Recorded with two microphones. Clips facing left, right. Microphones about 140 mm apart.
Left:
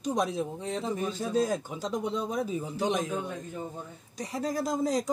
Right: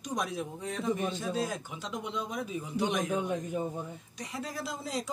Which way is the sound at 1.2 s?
40° left (ahead or behind).